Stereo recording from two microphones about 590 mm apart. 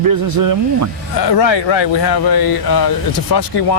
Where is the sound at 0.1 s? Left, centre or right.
Right.